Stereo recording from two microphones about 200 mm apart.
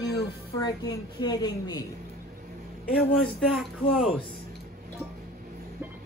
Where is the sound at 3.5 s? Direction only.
Centre (ahead or behind).